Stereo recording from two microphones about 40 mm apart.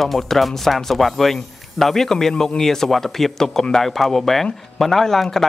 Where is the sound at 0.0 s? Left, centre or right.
Centre.